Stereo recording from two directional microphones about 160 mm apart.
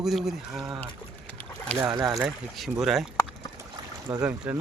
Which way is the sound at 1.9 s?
25° right (ahead or behind).